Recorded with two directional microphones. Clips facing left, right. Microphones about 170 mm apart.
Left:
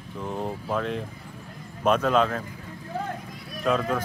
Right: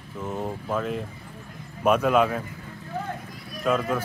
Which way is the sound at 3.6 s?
5° right (ahead or behind).